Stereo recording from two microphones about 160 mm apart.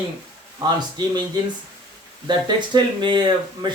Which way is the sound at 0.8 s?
25° right (ahead or behind).